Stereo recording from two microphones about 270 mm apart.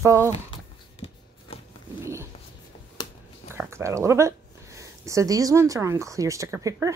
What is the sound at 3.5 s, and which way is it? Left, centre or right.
Speech, centre.